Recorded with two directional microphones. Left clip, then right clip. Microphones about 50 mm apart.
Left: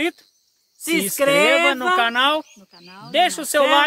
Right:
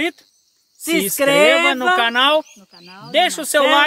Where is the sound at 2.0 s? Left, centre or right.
Right.